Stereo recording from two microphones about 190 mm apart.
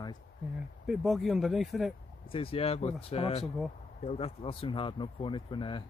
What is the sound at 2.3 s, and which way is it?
Speech, 30° left (ahead or behind).